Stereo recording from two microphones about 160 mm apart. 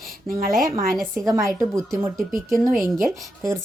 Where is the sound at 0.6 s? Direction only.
60° right (ahead or behind).